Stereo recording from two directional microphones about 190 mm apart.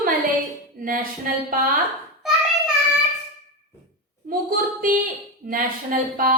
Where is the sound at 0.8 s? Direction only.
50° right (ahead or behind).